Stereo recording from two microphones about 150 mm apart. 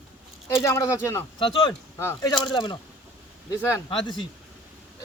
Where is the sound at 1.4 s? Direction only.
35° left (ahead or behind).